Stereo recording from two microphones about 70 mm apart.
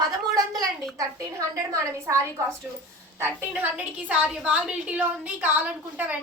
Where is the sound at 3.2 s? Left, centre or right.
Right.